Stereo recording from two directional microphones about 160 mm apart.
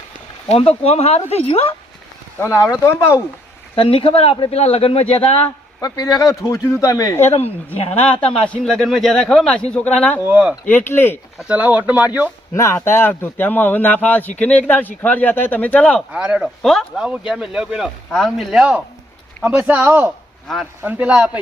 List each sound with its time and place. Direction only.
0.4 s speech: 40° left (ahead or behind)
2.4 s speech: 20° left (ahead or behind)
3.8 s speech: 35° left (ahead or behind)
5.8 s speech: 20° left (ahead or behind)
7.3 s speech: 40° left (ahead or behind)
8.2 s speech: 5° left (ahead or behind)
10.2 s speech: 5° right (ahead or behind)
10.7 s speech: 15° left (ahead or behind)
11.4 s speech: 10° right (ahead or behind)
12.5 s speech: 15° left (ahead or behind)
16.1 s speech: 5° right (ahead or behind)